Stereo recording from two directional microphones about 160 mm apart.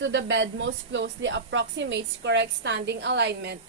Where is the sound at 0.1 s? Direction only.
90° right.